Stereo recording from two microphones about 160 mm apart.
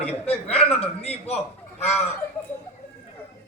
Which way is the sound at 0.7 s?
40° left (ahead or behind).